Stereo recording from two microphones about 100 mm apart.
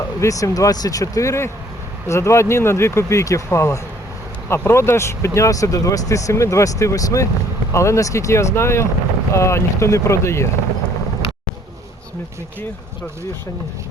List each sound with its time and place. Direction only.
0.2 s speech: 35° left (ahead or behind)